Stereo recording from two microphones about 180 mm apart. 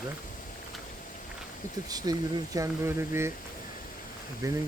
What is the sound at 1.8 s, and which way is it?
Speech, 20° right (ahead or behind).